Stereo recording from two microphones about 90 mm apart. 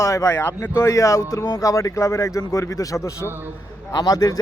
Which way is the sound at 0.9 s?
40° left (ahead or behind).